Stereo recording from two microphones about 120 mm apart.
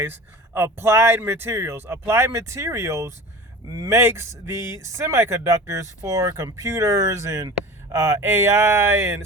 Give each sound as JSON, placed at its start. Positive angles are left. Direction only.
{"t": 0.0, "sound": "speech", "side_deg": -20}